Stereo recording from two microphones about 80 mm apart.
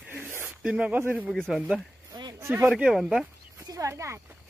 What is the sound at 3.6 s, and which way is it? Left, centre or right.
Speech, right.